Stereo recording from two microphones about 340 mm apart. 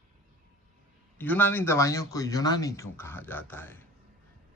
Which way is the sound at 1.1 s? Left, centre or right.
Centre.